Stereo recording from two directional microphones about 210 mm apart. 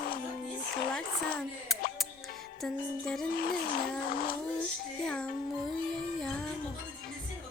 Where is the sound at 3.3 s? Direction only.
45° left (ahead or behind).